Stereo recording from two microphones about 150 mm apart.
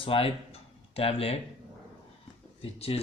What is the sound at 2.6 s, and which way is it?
Speech, 40° left (ahead or behind).